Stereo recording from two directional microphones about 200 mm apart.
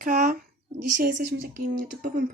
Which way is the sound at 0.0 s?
45° right (ahead or behind).